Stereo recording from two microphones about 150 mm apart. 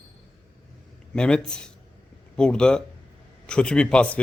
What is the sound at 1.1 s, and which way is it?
Speech, 5° left (ahead or behind).